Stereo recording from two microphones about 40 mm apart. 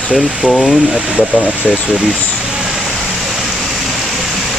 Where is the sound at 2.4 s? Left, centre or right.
Centre.